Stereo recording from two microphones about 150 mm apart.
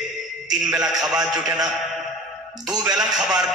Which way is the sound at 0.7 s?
5° right (ahead or behind).